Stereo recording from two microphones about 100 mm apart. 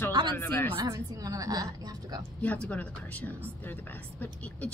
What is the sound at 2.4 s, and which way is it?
A woman's voice, 15° left (ahead or behind).